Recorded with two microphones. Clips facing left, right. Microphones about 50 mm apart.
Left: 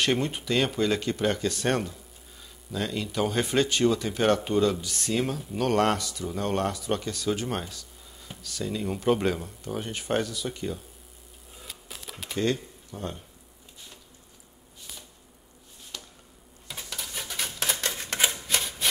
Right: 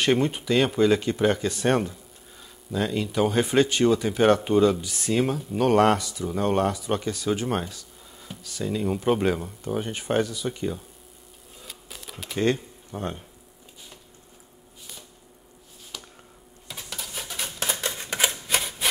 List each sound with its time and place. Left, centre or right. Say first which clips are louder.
0.0 s speech: right 4 dB; centre
11.5 s a sound: even; centre
12.4 s speech: right 3 dB; right
15.9 s a sound: right 1 dB; centre
16.6 s typewriter: right 1 dB; centre
18.5 s rub: right 2 dB; centre